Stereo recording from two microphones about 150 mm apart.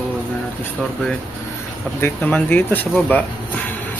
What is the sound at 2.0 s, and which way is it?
Speech, 10° left (ahead or behind).